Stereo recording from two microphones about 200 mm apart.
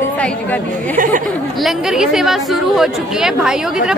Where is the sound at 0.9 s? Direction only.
40° right (ahead or behind).